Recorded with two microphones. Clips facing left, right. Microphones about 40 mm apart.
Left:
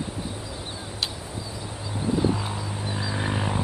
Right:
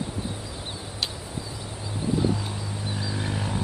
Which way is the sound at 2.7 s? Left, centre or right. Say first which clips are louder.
Left 2 dB; left.